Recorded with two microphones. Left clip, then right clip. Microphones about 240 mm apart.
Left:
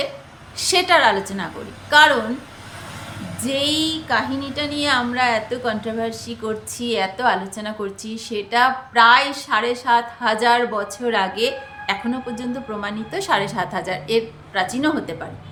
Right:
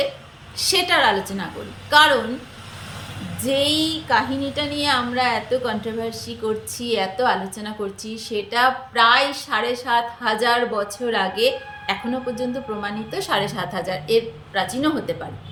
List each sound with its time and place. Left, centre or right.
0.5 s a woman's voice: centre
3.4 s a woman's voice: centre